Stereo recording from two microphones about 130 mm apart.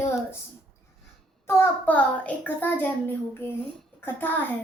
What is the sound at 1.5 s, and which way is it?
A woman's voice, 15° left (ahead or behind).